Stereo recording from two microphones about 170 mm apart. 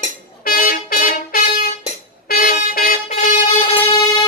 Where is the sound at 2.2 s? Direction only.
60° left (ahead or behind).